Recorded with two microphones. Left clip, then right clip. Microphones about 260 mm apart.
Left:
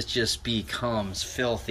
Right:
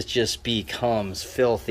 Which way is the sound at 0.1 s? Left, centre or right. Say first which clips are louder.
Right 3 dB; centre.